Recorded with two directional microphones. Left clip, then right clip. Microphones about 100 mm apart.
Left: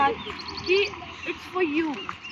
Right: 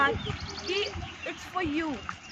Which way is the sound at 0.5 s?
65° right (ahead or behind).